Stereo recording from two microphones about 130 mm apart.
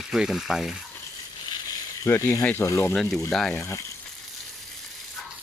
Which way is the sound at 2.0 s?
25° left (ahead or behind).